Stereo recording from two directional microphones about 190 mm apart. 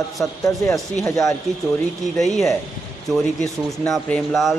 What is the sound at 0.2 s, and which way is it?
Speech, 5° left (ahead or behind).